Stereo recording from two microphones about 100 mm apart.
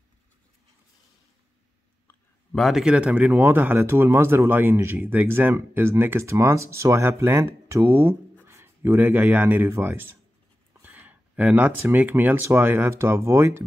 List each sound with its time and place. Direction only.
2.5 s speech: centre (ahead or behind); by 13.7 s 25° right (ahead or behind)